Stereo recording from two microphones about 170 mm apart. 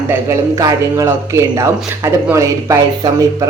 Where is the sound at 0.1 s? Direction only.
20° right (ahead or behind).